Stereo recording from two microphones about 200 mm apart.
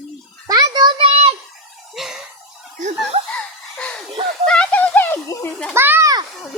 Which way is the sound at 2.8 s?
40° right (ahead or behind).